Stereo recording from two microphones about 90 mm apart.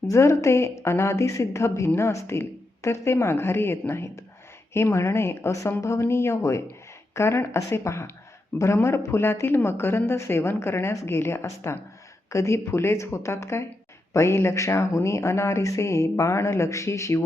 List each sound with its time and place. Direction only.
0.1 s speech: 35° left (ahead or behind)